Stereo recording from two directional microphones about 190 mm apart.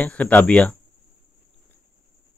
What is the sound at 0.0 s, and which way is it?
Speech, 10° left (ahead or behind).